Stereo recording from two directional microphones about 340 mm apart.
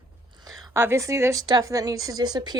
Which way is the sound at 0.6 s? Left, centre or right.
Centre.